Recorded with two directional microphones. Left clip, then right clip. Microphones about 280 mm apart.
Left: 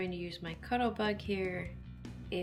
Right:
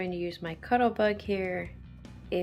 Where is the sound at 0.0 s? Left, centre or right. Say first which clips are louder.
Right 6 dB; centre.